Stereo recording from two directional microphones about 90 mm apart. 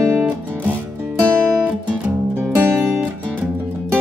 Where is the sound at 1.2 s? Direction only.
20° right (ahead or behind).